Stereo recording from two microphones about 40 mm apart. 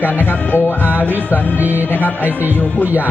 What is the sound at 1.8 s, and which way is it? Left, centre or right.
Speech, left.